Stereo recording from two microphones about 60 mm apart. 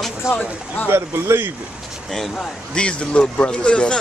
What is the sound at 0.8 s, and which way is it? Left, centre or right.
Speech, right.